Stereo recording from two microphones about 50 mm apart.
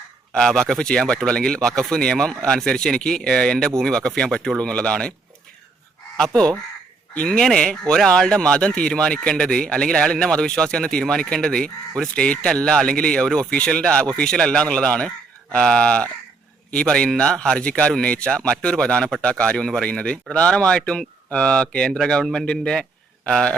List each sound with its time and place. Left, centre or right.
0.3 s speech: centre
6.1 s speech: centre
19.5 s speech: centre
21.9 s a man's voice: centre